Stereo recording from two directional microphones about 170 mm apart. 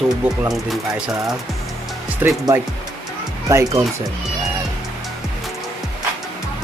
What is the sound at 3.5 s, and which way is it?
Speech, 20° right (ahead or behind).